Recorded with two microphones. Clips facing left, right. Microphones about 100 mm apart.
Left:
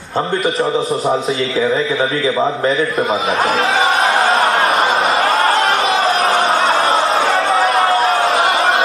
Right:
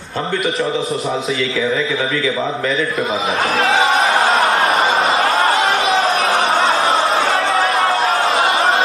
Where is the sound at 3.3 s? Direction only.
Centre (ahead or behind).